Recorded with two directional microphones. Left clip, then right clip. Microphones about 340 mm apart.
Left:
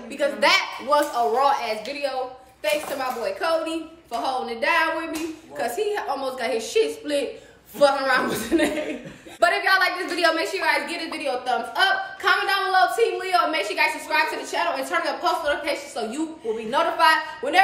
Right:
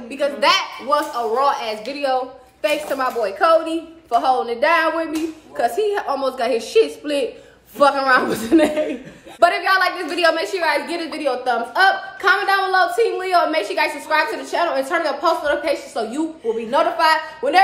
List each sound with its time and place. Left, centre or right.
0.2 s a woman's voice: centre